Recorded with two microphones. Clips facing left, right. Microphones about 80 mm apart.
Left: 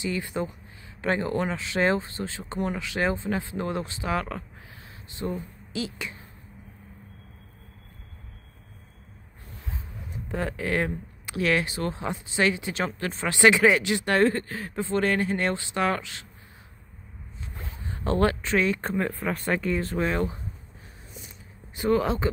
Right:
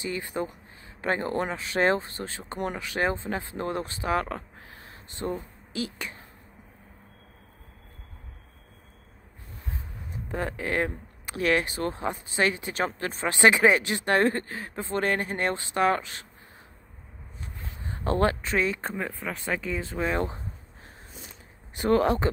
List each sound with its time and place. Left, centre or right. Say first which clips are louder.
0.0 s speech: left 2 dB; right
10.1 s speech: left 1 dB; right
17.8 s speech: left 1 dB; right
18.8 s speech: left 4 dB; centre
21.8 s speech: right 1 dB; right